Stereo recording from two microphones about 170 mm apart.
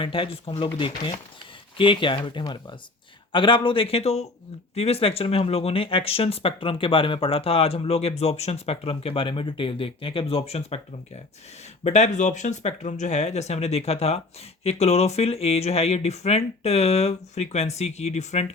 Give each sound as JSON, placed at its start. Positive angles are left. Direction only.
{"t": 0.0, "sound": "speech", "side_deg": 30}